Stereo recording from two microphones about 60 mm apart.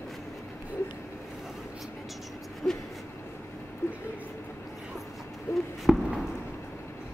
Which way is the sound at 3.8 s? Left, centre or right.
Left.